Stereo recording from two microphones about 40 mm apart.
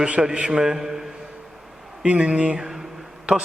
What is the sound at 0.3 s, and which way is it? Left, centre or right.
Mantra, right.